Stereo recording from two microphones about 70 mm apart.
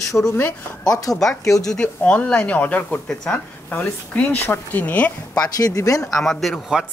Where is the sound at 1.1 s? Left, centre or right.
Centre.